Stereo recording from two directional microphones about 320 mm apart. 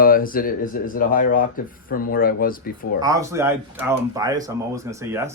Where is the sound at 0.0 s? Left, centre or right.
Left.